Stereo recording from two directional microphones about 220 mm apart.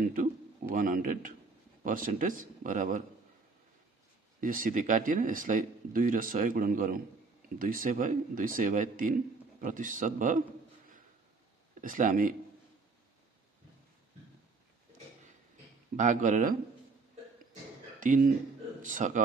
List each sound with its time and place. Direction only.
0.0 s a man's voice: 35° right (ahead or behind)
4.4 s a man's voice: 40° right (ahead or behind)
11.8 s a man's voice: 35° right (ahead or behind)
16.0 s a man's voice: 35° right (ahead or behind)
18.0 s a man's voice: 35° right (ahead or behind)